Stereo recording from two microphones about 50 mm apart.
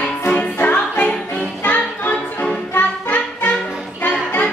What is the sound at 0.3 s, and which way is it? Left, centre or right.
Music, left.